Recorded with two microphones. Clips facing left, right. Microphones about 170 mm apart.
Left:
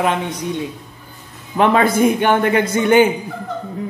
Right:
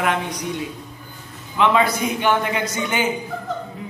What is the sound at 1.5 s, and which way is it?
A man's voice, 50° left (ahead or behind).